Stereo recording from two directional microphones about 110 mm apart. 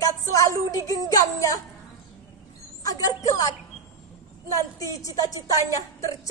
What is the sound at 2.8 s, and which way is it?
A woman's voice, 35° left (ahead or behind).